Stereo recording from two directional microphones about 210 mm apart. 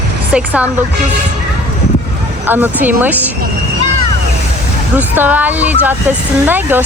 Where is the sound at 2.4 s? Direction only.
10° right (ahead or behind).